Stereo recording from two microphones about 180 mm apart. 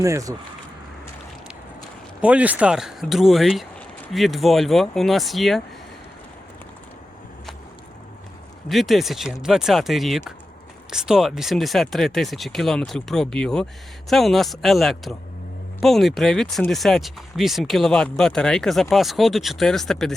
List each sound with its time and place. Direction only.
0.0 s speech: 20° right (ahead or behind)
2.2 s speech: 5° right (ahead or behind)
8.7 s speech: centre (ahead or behind)